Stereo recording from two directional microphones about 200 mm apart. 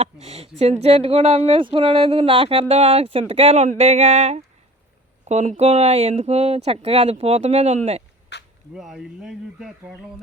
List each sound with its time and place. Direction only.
0.0 s speech: 30° right (ahead or behind)
8.3 s a sound: 60° left (ahead or behind)
8.7 s speech: centre (ahead or behind)